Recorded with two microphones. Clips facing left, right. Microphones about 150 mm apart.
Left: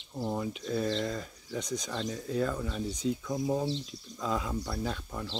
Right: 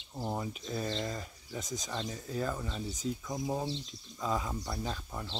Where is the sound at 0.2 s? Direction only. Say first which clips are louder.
Left 3 dB; 15° right (ahead or behind).